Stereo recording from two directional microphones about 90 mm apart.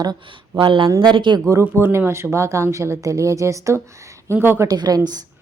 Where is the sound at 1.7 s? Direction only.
25° right (ahead or behind).